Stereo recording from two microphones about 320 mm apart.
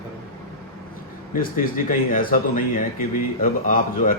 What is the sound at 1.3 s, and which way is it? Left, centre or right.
Speech, left.